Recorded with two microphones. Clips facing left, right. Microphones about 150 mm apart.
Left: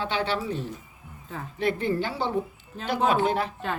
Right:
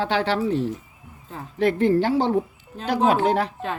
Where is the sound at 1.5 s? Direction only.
75° right (ahead or behind).